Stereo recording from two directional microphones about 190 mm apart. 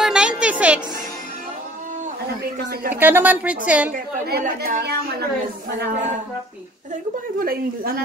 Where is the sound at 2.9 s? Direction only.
10° right (ahead or behind).